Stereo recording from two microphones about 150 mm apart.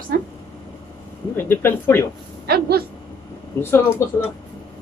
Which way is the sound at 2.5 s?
90° right.